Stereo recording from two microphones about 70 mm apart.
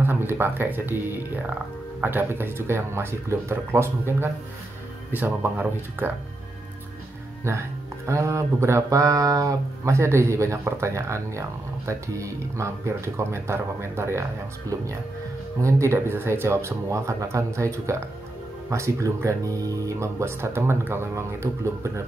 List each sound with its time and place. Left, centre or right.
0.0 s speech: right
8.1 s speech: right
15.6 s speech: right